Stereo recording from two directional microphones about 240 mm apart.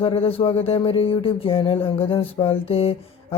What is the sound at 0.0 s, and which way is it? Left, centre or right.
Speech, left.